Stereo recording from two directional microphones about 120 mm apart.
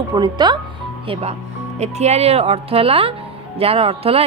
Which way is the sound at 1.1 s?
60° right (ahead or behind).